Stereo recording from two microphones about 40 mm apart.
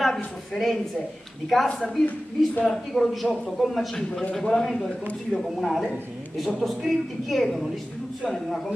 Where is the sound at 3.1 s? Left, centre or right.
Centre.